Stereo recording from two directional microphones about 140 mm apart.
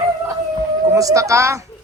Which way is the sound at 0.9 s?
25° right (ahead or behind).